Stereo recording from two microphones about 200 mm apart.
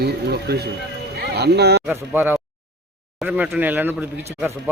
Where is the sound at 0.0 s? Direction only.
55° right (ahead or behind).